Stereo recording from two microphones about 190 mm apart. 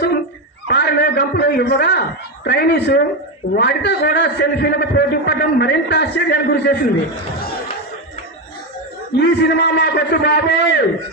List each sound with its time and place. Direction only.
0.7 s a man's voice: 60° left (ahead or behind)
9.1 s a man's voice: 60° left (ahead or behind)